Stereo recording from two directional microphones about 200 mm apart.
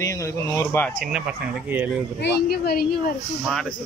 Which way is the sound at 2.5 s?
50° left (ahead or behind).